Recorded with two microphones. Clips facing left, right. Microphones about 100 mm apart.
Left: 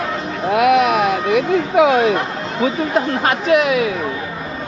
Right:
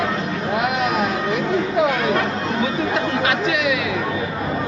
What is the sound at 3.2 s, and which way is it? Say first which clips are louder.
Speech: left 5 dB; 45° left (ahead or behind).